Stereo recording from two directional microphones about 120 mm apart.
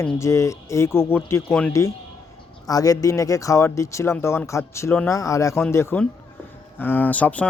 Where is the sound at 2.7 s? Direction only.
30° left (ahead or behind).